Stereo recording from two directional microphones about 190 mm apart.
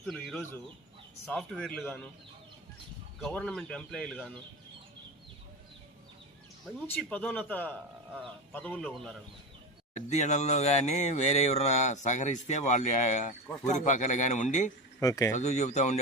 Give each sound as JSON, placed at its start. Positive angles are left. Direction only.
{"t": 0.0, "sound": "speech", "side_deg": 0}
{"t": 3.2, "sound": "speech", "side_deg": 5}
{"t": 6.7, "sound": "speech", "side_deg": 10}
{"t": 9.9, "sound": "speech", "side_deg": 35}
{"t": 15.0, "sound": "speech", "side_deg": 15}
{"t": 15.4, "sound": "speech", "side_deg": 40}